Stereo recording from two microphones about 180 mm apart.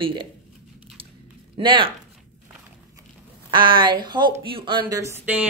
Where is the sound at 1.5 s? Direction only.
30° right (ahead or behind).